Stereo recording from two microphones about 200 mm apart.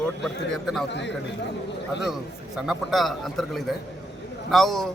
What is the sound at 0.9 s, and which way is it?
A man's voice, 60° left (ahead or behind).